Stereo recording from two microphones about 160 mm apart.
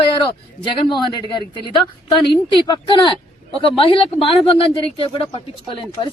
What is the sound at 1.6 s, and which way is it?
Speech, 30° left (ahead or behind).